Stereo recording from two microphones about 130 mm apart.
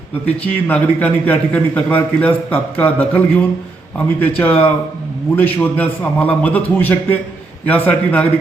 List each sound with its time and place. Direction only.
0.3 s a man's voice: 10° left (ahead or behind)